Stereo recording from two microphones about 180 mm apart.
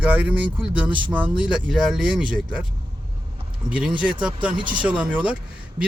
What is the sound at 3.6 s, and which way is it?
Speech, 5° right (ahead or behind).